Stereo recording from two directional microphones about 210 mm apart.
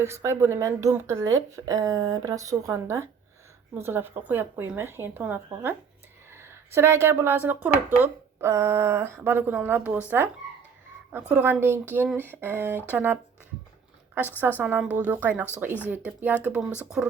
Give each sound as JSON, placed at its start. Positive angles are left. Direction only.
{"t": 0.0, "sound": "speech", "side_deg": -15}
{"t": 11.1, "sound": "speech", "side_deg": -5}
{"t": 14.6, "sound": "speech", "side_deg": -5}